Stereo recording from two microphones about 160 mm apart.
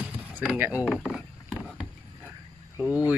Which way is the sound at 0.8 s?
Centre (ahead or behind).